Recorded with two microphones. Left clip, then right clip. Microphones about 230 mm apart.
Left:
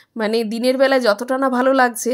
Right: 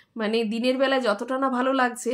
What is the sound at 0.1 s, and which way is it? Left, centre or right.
A woman's voice, left.